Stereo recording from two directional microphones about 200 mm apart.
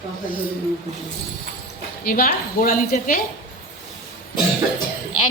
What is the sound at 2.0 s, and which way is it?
A woman's voice, 45° left (ahead or behind).